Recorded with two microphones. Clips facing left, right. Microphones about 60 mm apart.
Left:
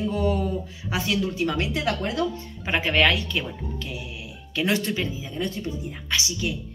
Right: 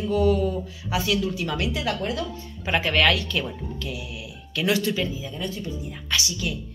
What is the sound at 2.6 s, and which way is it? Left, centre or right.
Speech, centre.